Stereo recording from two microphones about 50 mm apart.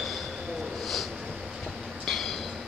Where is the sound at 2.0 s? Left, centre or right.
Centre.